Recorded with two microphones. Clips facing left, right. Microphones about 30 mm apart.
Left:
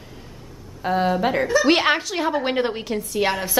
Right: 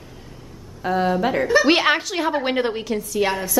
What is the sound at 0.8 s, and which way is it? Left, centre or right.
A woman's voice, centre.